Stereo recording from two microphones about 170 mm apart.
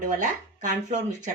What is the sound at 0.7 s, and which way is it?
Speech, 45° right (ahead or behind).